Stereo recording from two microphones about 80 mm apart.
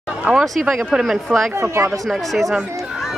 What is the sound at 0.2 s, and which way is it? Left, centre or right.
Speech, centre.